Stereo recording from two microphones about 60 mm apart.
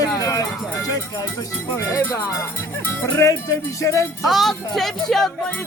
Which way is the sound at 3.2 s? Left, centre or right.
Left.